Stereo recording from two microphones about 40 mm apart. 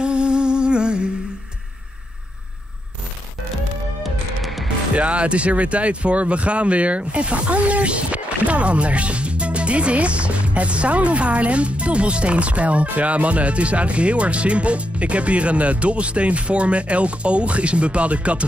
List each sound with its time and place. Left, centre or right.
0.0 s humming: right
4.4 s music: centre
4.9 s speech: right